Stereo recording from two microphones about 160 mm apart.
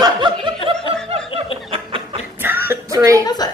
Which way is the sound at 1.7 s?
35° right (ahead or behind).